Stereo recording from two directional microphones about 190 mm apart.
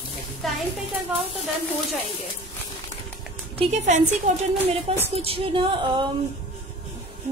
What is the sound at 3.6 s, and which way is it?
A woman's voice, 35° right (ahead or behind).